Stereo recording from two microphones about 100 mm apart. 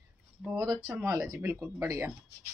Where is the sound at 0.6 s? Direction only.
Centre (ahead or behind).